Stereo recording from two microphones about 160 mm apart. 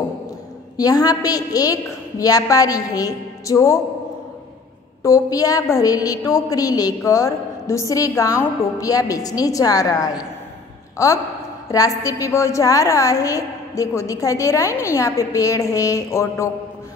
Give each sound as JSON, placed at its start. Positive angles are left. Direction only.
{"t": 0.7, "sound": "a woman's voice", "side_deg": 25}
{"t": 5.0, "sound": "a woman's voice", "side_deg": 20}
{"t": 11.7, "sound": "a woman's voice", "side_deg": 20}